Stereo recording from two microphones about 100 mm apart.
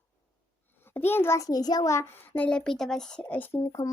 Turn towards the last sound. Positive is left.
turn(degrees=35)  # may be behind; listen again after turning